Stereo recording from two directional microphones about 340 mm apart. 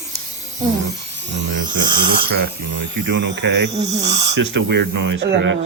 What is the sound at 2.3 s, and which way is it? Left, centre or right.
Speech, right.